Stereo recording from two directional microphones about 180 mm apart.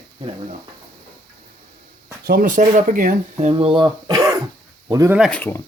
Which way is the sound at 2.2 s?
50° right (ahead or behind).